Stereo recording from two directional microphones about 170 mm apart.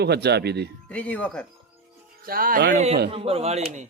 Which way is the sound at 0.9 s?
10° left (ahead or behind).